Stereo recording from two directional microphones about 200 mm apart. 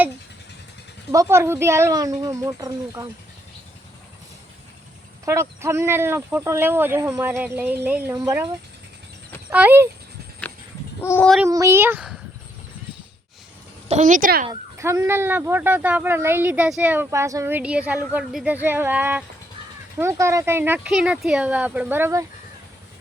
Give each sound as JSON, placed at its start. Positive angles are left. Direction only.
{"t": 1.1, "sound": "speech", "side_deg": -15}
{"t": 5.2, "sound": "speech", "side_deg": -15}
{"t": 9.5, "sound": "speech", "side_deg": -10}
{"t": 11.0, "sound": "speech", "side_deg": 10}
{"t": 11.4, "sound": "speech", "side_deg": -15}
{"t": 13.8, "sound": "a woman's voice", "side_deg": -35}
{"t": 14.4, "sound": "speech", "side_deg": -15}